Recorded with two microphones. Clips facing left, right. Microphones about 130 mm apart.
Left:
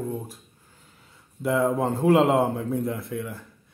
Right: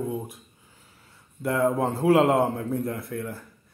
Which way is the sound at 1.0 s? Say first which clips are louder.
Left 2 dB; centre (ahead or behind).